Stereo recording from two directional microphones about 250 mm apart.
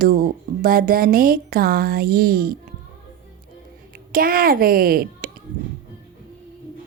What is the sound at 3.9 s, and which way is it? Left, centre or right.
Speech, right.